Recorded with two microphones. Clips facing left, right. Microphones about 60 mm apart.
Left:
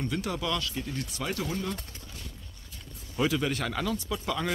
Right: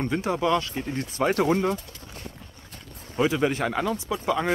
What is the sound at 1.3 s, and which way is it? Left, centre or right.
Speech, right.